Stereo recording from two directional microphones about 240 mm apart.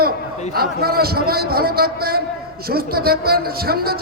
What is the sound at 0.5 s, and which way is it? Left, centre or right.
Speech, right.